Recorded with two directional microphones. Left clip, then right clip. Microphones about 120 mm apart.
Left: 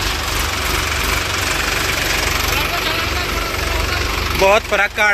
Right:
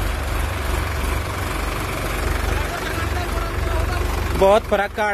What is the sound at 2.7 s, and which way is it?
Vehicle, 85° right.